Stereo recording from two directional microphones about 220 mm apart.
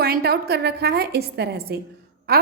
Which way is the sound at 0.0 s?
45° right (ahead or behind).